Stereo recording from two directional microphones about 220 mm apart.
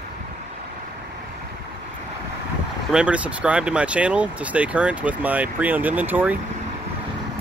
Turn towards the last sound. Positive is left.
turn(degrees=-10)  # may be behind; listen again after turning